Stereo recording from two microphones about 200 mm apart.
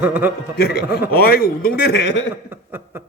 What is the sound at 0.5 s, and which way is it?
Speech, 50° left (ahead or behind).